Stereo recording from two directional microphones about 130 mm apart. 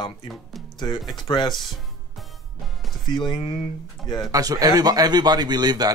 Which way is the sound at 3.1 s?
35° left (ahead or behind).